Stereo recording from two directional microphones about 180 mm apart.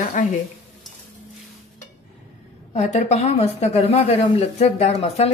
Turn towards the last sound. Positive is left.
turn(degrees=35)  # may be behind; listen again after turning